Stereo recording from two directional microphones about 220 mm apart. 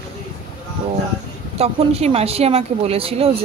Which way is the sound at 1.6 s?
25° right (ahead or behind).